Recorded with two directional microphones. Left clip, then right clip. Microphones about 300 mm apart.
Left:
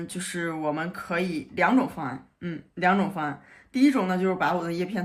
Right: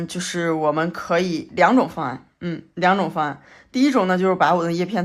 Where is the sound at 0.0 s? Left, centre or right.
Centre.